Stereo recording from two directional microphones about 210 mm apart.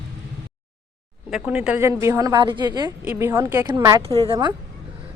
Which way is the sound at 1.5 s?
5° right (ahead or behind).